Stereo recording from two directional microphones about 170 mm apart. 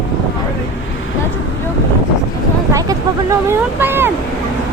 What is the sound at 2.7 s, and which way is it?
Speech, 20° right (ahead or behind).